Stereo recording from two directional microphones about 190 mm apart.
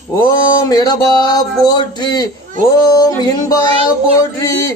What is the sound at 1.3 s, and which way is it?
Speech, 20° left (ahead or behind).